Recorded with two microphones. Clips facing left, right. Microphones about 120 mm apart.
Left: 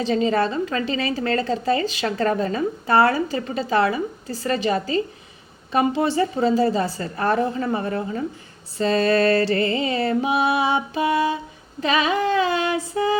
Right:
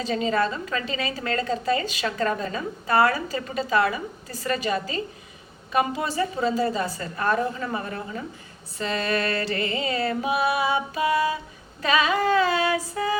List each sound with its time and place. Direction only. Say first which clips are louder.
0.0 s a woman's voice: left 4 dB; 30° left (ahead or behind)
5.7 s music: left 5 dB; 30° left (ahead or behind)